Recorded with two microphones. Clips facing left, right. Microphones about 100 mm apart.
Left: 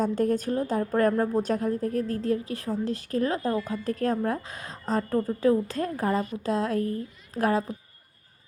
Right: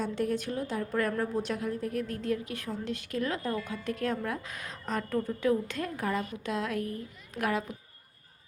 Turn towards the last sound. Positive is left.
turn(degrees=35)  # may be behind; listen again after turning